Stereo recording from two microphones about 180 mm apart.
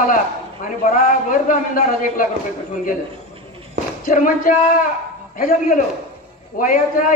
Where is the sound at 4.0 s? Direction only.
50° left (ahead or behind).